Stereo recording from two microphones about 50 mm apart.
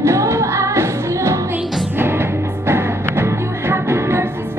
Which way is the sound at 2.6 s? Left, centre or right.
Right.